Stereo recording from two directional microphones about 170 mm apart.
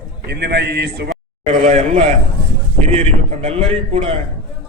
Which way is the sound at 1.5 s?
40° right (ahead or behind).